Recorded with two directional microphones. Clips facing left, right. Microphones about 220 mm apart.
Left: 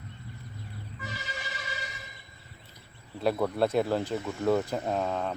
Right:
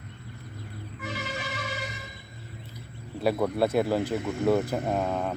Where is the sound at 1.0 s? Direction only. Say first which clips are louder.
Right 7 dB; 60° right (ahead or behind).